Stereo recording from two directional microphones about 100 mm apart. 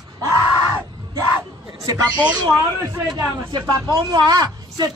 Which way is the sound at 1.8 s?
40° right (ahead or behind).